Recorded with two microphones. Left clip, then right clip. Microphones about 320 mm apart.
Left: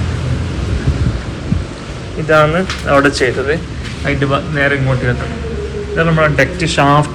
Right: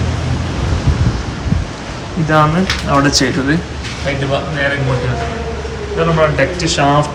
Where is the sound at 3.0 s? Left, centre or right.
Centre.